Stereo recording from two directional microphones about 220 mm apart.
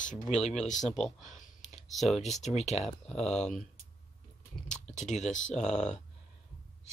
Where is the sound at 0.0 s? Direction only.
35° left (ahead or behind).